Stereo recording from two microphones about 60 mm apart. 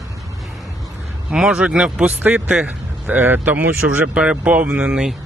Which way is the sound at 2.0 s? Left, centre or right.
Right.